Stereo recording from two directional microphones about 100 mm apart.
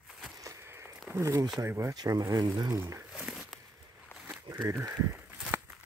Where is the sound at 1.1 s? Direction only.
30° right (ahead or behind).